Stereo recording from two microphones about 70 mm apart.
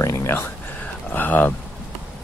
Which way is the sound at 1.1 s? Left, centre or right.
Left.